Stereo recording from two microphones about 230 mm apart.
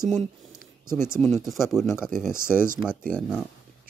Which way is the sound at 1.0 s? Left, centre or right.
Centre.